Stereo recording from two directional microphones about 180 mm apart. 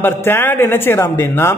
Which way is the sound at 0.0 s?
10° left (ahead or behind).